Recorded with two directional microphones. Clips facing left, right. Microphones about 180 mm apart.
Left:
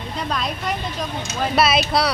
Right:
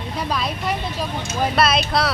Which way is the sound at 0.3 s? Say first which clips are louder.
Right 1 dB; 5° right (ahead or behind).